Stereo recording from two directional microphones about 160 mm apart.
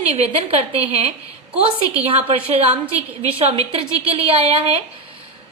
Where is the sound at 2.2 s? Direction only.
40° right (ahead or behind).